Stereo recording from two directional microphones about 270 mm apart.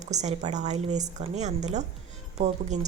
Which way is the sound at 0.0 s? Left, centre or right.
Right.